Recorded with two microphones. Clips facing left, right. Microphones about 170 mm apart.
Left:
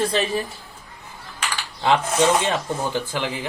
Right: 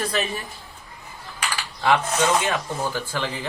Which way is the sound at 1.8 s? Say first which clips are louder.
Left 2 dB; 25° left (ahead or behind).